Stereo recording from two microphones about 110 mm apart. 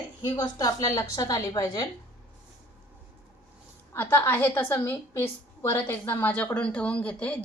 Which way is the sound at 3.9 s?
20° left (ahead or behind).